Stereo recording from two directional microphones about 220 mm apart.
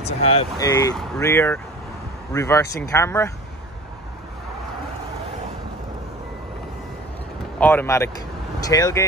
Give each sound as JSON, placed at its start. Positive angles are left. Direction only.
{"t": 0.0, "sound": "speech", "side_deg": 30}
{"t": 7.5, "sound": "speech", "side_deg": 10}